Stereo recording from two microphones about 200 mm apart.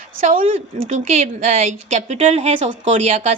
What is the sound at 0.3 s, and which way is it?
Speech, 40° right (ahead or behind).